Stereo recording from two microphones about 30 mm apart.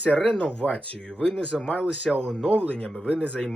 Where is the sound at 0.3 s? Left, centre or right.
Left.